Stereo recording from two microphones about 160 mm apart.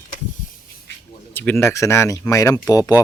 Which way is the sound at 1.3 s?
15° left (ahead or behind).